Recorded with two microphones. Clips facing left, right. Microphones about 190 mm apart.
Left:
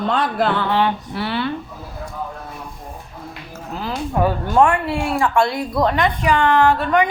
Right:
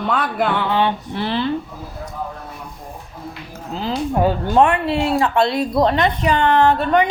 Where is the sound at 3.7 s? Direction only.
25° right (ahead or behind).